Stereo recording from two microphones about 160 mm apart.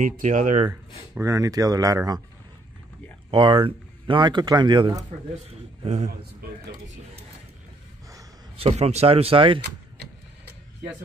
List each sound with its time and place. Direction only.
0.0 s speech: 50° right (ahead or behind)
1.2 s speech: 20° right (ahead or behind)
3.3 s speech: 30° right (ahead or behind)
5.5 s speech: 45° right (ahead or behind)
8.5 s speech: 40° right (ahead or behind)